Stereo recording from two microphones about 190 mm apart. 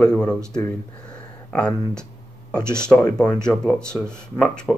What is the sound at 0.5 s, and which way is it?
Speech, 15° left (ahead or behind).